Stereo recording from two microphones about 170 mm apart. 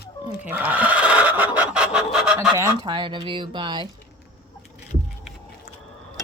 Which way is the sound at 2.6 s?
25° right (ahead or behind).